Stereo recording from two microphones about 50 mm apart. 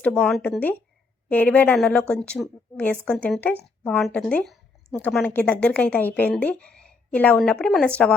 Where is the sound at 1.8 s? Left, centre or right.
Left.